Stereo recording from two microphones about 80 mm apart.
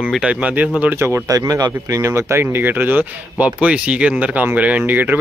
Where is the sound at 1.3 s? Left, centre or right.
Right.